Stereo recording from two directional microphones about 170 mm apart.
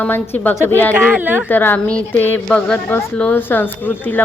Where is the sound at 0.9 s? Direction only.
10° right (ahead or behind).